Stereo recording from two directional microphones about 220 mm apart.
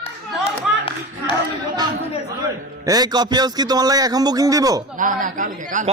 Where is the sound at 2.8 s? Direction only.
15° right (ahead or behind).